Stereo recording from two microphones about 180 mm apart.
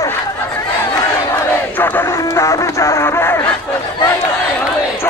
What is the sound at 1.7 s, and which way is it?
Music, 10° left (ahead or behind).